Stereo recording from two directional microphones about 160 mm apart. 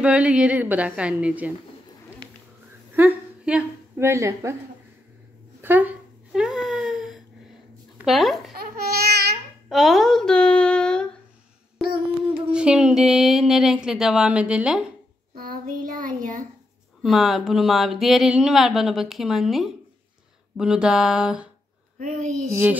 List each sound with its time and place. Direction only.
0.0 s a woman's voice: 10° right (ahead or behind)
3.0 s a woman's voice: 10° right (ahead or behind)
5.6 s a sound: 10° right (ahead or behind)
8.0 s speech: centre (ahead or behind)
8.5 s laughter: 85° right
9.7 s child singing: centre (ahead or behind)
12.4 s speech: 5° right (ahead or behind)
15.3 s child singing: 65° right (ahead or behind)
17.0 s speech: centre (ahead or behind)
21.9 s a sound: 55° right (ahead or behind)